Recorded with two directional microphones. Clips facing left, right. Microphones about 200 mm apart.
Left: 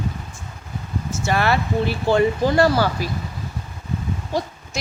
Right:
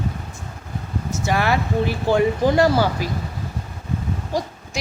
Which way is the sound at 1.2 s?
15° right (ahead or behind).